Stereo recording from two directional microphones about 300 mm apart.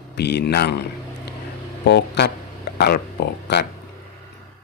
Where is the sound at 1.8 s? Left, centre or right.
Left.